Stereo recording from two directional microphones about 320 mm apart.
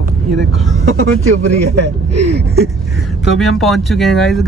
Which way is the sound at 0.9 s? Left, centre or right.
Right.